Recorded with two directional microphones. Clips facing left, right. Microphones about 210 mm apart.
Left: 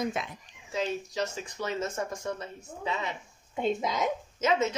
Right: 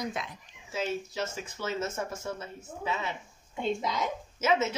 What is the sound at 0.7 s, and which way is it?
Speech, 5° right (ahead or behind).